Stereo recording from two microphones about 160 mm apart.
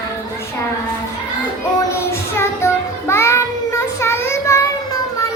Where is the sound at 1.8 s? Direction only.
15° left (ahead or behind).